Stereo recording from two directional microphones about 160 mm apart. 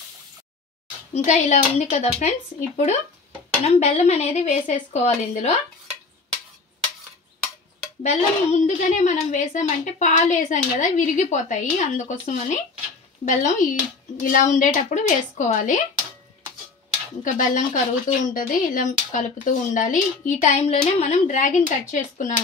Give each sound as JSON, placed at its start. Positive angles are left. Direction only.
{"t": 1.1, "sound": "a woman's voice", "side_deg": 45}
{"t": 8.0, "sound": "a woman's voice", "side_deg": 45}
{"t": 17.2, "sound": "a woman's voice", "side_deg": 55}